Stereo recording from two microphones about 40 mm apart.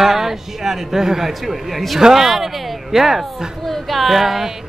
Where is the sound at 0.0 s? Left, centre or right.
Centre.